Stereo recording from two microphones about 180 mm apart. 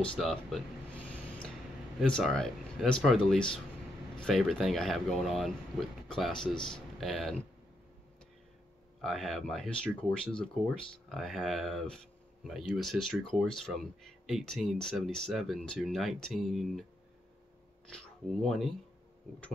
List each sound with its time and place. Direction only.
0.0 s speech: 5° left (ahead or behind)
1.0 s a sound: 5° left (ahead or behind)
2.0 s speech: 5° left (ahead or behind)
9.0 s speech: centre (ahead or behind)
17.9 s speech: centre (ahead or behind)